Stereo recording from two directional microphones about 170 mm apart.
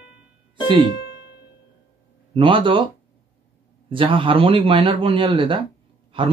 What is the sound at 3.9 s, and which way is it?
Speech, 30° right (ahead or behind).